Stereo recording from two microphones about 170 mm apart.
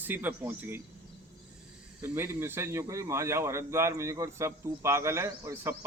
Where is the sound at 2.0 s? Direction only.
15° right (ahead or behind).